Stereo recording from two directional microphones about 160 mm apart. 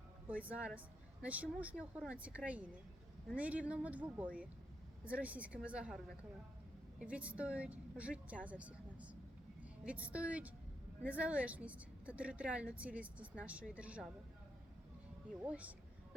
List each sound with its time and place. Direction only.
0.3 s speech: 10° right (ahead or behind)
7.0 s speech: 10° right (ahead or behind)
15.4 s speech: 10° right (ahead or behind)